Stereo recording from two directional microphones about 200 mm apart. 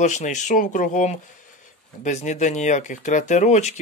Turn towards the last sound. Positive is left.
turn(degrees=35)  # may be behind; listen again after turning